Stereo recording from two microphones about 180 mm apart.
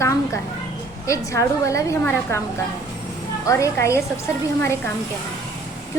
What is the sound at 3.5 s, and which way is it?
A woman's voice, 15° left (ahead or behind).